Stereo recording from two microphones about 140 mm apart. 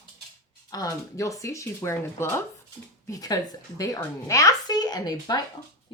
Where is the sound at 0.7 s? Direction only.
25° left (ahead or behind).